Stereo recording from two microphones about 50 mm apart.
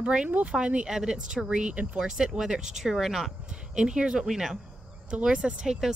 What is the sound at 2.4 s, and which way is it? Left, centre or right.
Speech, centre.